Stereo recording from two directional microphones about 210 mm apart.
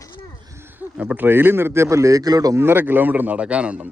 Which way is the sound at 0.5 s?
10° right (ahead or behind).